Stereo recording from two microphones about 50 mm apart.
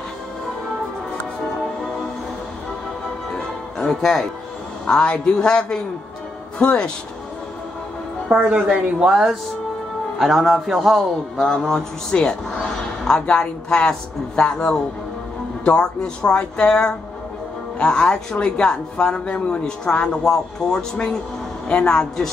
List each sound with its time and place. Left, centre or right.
3.8 s a woman's voice: centre
4.8 s a woman's voice: centre
8.5 s speech: centre
10.1 s a man's voice: centre